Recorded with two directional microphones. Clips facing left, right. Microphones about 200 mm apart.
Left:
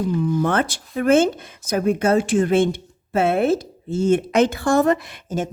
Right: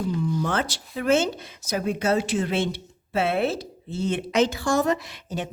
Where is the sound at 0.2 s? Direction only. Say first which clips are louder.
Left 5 dB; 55° left (ahead or behind).